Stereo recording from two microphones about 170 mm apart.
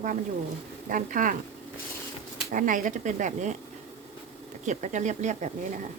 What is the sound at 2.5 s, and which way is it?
Speech, 50° right (ahead or behind).